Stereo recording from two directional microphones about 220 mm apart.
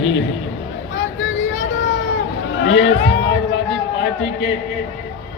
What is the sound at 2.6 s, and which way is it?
Speech, 55° left (ahead or behind).